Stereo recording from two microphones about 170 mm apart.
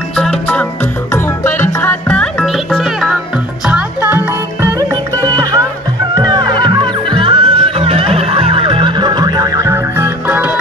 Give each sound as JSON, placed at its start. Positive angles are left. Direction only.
{"t": 0.1, "sound": "music", "side_deg": 5}
{"t": 5.2, "sound": "music", "side_deg": -25}